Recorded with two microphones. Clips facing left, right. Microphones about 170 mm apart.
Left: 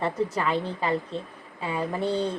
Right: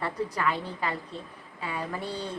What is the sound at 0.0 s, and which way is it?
Speech, 25° left (ahead or behind).